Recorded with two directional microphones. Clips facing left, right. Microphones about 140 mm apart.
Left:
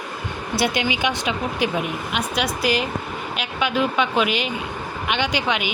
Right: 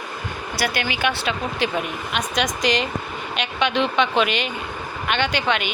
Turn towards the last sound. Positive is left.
turn(degrees=10)  # may be behind; listen again after turning